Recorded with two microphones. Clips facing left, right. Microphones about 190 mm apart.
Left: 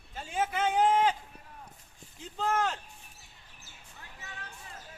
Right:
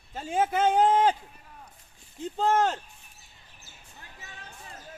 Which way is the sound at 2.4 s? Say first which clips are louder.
Right 6 dB; 35° right (ahead or behind).